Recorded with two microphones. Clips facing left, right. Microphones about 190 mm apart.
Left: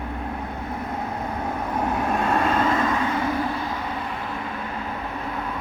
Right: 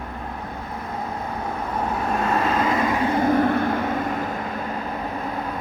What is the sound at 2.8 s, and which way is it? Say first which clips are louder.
Vehicle: right 1 dB; 20° right (ahead or behind).